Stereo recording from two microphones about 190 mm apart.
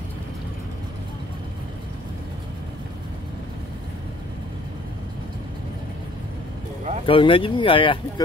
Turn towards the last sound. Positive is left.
turn(degrees=25)  # may be behind; listen again after turning